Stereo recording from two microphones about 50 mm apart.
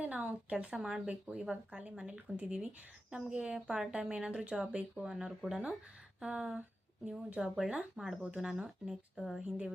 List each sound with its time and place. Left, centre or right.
0.0 s speech: right; by 1.1 s centre
1.1 s speech: right
6.6 s speech: right
7.3 s speech: centre